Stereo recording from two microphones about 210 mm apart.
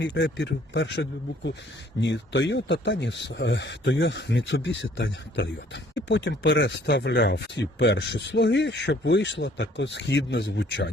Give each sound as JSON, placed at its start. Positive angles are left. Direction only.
{"t": 0.0, "sound": "speech", "side_deg": 55}